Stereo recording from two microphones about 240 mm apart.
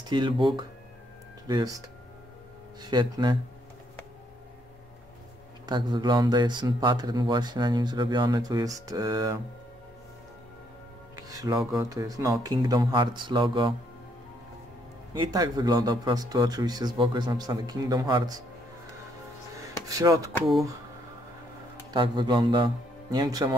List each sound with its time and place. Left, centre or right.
0.1 s speech: centre
5.7 s speech: centre
11.1 s speech: centre
15.1 s speech: centre
19.5 s music: centre
21.9 s speech: centre